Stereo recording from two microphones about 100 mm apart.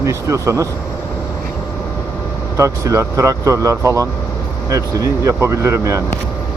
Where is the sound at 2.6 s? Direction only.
30° right (ahead or behind).